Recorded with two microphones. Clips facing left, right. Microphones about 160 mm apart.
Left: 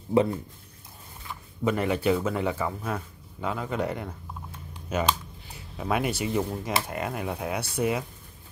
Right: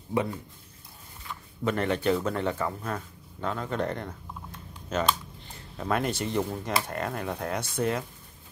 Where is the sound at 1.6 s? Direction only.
10° left (ahead or behind).